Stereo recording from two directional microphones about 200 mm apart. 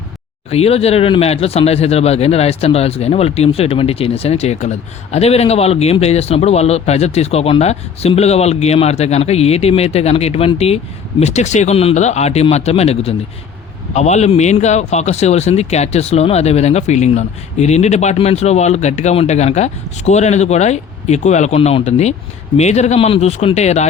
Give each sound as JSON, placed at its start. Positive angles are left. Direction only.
{"t": 0.5, "sound": "speech", "side_deg": 30}